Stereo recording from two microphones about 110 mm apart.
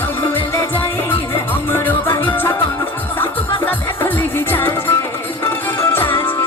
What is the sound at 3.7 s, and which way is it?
Music, 20° left (ahead or behind).